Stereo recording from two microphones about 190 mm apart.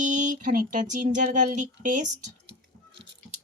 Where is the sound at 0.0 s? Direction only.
40° right (ahead or behind).